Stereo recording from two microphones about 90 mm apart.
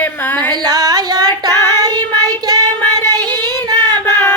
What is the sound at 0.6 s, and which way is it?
Child singing, 45° right (ahead or behind).